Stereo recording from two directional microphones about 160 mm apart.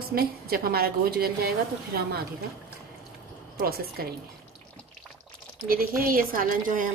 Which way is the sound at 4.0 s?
65° right (ahead or behind).